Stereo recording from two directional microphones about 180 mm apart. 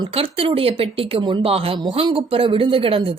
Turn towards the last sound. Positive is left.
turn(degrees=-30)  # may be behind; listen again after turning